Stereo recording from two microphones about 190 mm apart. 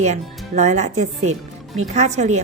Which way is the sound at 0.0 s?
40° right (ahead or behind).